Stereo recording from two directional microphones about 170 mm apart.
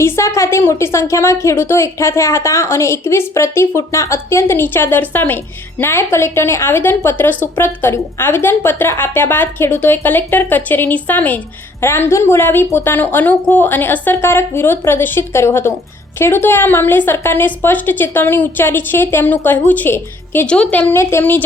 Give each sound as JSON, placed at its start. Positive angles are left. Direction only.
{"t": 0.0, "sound": "a woman's voice", "side_deg": 15}